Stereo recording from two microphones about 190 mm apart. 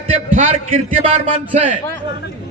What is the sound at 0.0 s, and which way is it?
A man's voice, 35° right (ahead or behind).